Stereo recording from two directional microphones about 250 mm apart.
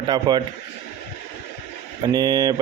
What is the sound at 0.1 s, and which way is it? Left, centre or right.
Speech, centre.